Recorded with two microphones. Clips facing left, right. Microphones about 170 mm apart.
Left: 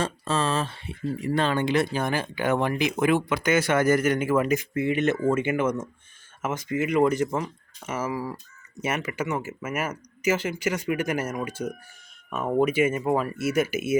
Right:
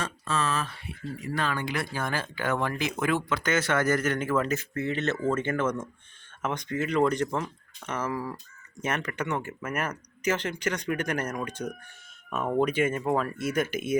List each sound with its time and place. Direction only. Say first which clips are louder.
0.0 s speech: left 4 dB; 30° left (ahead or behind); by 14.0 s 5° left (ahead or behind)